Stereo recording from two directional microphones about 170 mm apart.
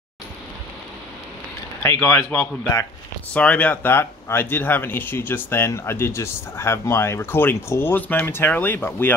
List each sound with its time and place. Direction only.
1.8 s speech: 15° left (ahead or behind)